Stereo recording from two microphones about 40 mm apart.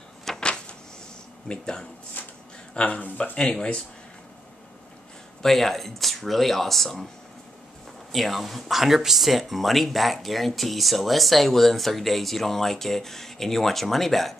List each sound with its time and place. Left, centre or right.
0.4 s a sound: left
1.5 s speech: centre
2.2 s a sound: left
2.7 s speech: left
5.4 s speech: centre
8.1 s speech: centre